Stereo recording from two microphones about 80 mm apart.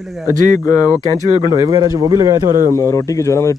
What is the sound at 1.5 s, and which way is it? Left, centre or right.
A man's voice, right.